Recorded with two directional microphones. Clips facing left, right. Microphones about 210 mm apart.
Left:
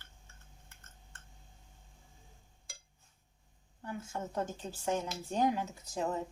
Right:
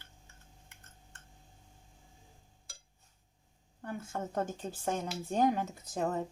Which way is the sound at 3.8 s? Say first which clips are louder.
Right 2 dB; 55° right (ahead or behind).